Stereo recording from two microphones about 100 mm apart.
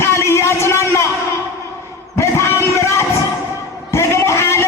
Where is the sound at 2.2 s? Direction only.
30° left (ahead or behind).